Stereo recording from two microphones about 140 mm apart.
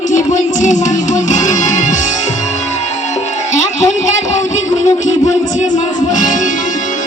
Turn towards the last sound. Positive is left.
turn(degrees=65)  # may be behind; listen again after turning